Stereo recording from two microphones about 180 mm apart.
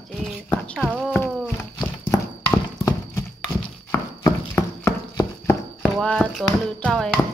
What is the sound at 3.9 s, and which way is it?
Horse, 15° left (ahead or behind).